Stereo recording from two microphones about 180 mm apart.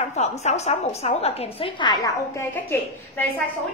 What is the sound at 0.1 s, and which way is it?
A woman's voice, 40° left (ahead or behind).